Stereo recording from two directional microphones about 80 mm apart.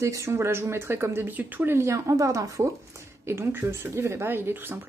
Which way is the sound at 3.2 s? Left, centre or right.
Right.